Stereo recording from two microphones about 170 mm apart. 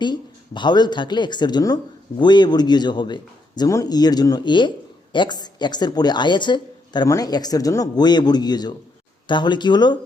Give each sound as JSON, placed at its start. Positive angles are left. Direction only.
{"t": 0.0, "sound": "speech", "side_deg": 25}